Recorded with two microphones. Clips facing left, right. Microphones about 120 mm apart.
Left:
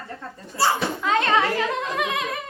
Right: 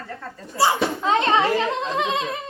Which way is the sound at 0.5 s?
20° right (ahead or behind).